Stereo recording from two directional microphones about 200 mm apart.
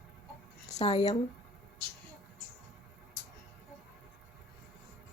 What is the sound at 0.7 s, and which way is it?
Speech, 30° left (ahead or behind).